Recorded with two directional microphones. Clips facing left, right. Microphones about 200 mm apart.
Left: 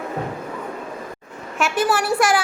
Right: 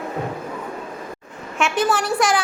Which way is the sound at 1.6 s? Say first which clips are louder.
Even; 5° left (ahead or behind).